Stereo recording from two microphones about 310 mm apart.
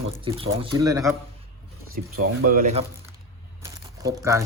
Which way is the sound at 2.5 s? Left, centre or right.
Right.